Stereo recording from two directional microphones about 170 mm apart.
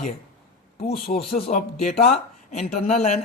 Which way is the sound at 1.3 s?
40° left (ahead or behind).